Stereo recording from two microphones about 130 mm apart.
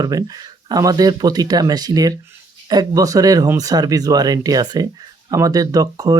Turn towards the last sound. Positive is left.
turn(degrees=-30)  # may be behind; listen again after turning